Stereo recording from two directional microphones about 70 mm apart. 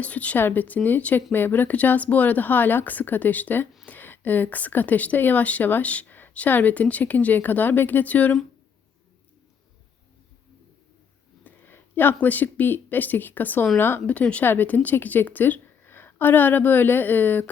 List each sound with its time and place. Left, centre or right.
0.0 s speech: centre
11.4 s speech: left